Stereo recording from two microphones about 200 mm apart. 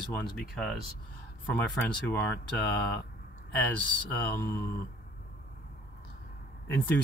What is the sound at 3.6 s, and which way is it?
Speech, 10° left (ahead or behind).